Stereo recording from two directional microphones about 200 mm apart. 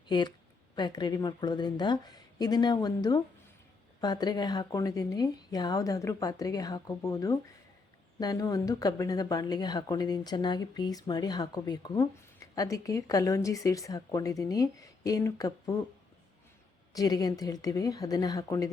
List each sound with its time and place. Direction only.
0.1 s a woman's voice: 20° left (ahead or behind)
16.9 s a woman's voice: 20° left (ahead or behind)